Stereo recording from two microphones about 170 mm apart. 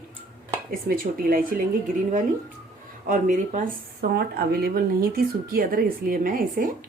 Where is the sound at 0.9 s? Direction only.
60° right (ahead or behind).